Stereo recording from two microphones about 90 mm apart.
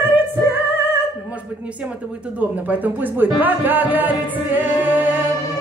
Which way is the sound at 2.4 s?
20° right (ahead or behind).